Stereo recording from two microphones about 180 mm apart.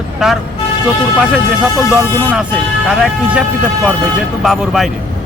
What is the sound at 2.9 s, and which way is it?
Speech, 5° right (ahead or behind).